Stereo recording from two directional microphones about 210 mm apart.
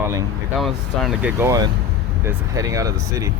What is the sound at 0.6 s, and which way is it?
Speech, centre (ahead or behind).